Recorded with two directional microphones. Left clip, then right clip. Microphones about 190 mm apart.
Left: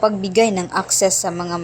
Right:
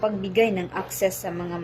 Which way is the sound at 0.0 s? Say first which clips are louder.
Left 6 dB; 25° left (ahead or behind).